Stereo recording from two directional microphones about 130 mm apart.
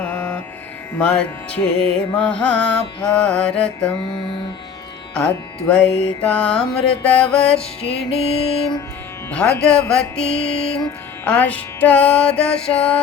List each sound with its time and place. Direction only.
0.0 s music: 10° left (ahead or behind)
0.9 s mantra: 10° left (ahead or behind)
5.1 s mantra: 5° left (ahead or behind)
7.9 s mantra: 50° left (ahead or behind)
9.3 s mantra: 10° left (ahead or behind)
10.3 s mantra: 50° left (ahead or behind)
11.3 s mantra: 10° left (ahead or behind)